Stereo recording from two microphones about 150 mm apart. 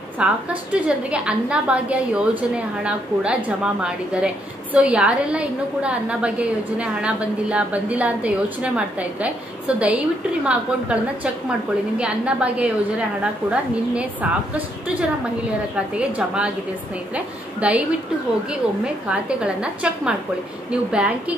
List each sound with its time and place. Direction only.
0.2 s a woman's voice: 10° right (ahead or behind)
12.0 s a woman's voice: 5° right (ahead or behind)
19.0 s a woman's voice: 5° right (ahead or behind)